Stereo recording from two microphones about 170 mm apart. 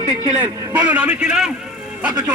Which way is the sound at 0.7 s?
10° right (ahead or behind).